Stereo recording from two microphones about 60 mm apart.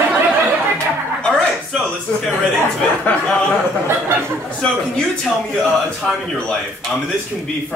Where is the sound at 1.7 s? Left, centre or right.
Centre.